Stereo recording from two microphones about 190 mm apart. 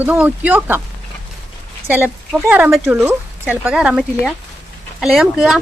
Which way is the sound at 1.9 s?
10° right (ahead or behind).